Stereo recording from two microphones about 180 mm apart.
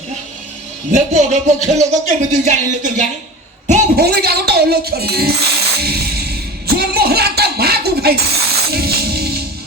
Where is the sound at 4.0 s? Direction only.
60° right (ahead or behind).